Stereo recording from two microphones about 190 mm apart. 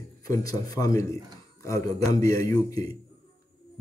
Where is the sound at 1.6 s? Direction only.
15° left (ahead or behind).